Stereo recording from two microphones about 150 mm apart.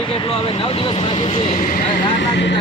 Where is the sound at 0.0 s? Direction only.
35° left (ahead or behind).